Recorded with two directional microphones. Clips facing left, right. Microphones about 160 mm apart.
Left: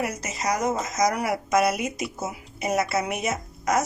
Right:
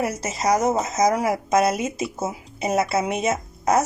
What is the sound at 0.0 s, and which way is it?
Speech, 30° right (ahead or behind).